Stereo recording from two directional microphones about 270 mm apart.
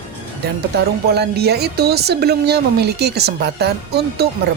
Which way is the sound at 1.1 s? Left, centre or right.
Right.